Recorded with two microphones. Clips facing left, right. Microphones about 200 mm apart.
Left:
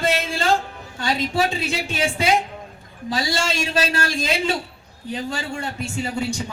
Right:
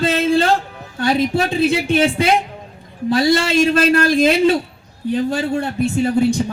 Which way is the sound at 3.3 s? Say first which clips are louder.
Right 8 dB; 55° right (ahead or behind).